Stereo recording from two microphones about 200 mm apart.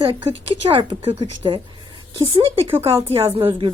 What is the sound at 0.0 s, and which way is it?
A woman's voice, 25° right (ahead or behind).